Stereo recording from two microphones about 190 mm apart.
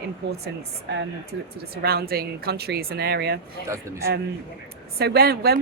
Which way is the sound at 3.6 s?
15° right (ahead or behind).